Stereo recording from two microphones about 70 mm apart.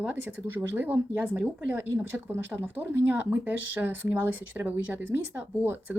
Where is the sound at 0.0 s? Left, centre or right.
Right.